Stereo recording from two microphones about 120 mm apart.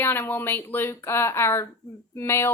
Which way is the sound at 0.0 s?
20° left (ahead or behind).